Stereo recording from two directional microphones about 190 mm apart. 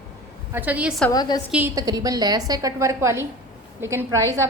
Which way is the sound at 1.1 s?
20° left (ahead or behind).